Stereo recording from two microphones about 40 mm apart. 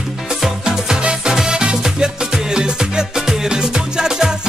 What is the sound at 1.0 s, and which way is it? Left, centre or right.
Music, right.